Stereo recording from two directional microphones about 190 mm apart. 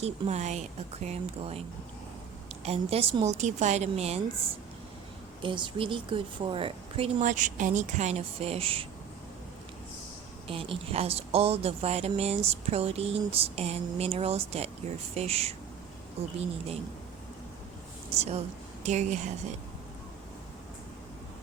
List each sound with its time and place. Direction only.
0.0 s speech: 35° right (ahead or behind)
2.6 s speech: 30° right (ahead or behind)
5.4 s a woman's voice: 25° right (ahead or behind)
10.5 s speech: 30° right (ahead or behind)
18.1 s a woman's voice: 35° right (ahead or behind)